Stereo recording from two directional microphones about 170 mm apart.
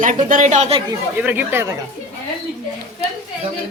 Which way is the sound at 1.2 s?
15° right (ahead or behind).